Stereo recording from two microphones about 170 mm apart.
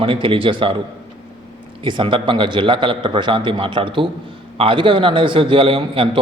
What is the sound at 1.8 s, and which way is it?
A man's voice, 30° right (ahead or behind).